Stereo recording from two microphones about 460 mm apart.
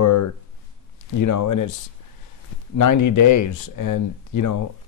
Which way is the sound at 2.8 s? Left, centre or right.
Left.